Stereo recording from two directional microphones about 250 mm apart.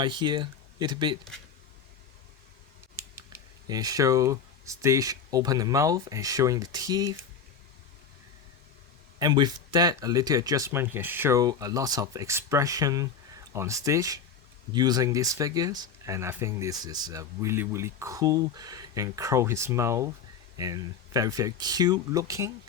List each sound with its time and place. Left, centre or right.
0.0 s speech: centre
2.9 s speech: centre
9.1 s speech: centre